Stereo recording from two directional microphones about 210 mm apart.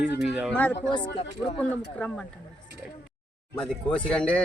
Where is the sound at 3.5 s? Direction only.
5° left (ahead or behind).